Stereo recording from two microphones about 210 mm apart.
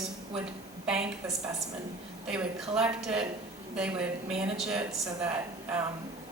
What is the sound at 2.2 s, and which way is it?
A woman's voice, 5° right (ahead or behind).